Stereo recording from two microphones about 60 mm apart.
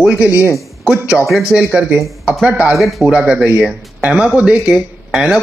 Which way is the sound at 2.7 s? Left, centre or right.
Centre.